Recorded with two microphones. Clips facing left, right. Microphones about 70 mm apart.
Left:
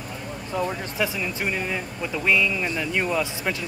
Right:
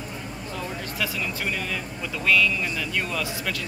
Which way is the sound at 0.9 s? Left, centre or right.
Left.